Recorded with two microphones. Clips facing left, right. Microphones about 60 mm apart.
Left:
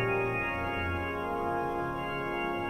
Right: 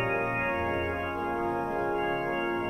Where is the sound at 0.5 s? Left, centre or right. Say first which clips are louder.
Right 3 dB; right.